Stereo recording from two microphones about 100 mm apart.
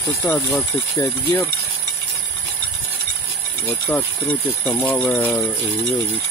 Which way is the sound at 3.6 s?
15° left (ahead or behind).